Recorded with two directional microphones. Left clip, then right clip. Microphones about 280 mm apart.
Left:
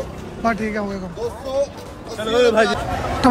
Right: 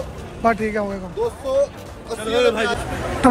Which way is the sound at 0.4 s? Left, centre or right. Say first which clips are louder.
Right 2 dB; centre.